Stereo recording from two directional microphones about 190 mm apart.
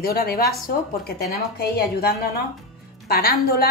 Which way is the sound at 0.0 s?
55° left (ahead or behind).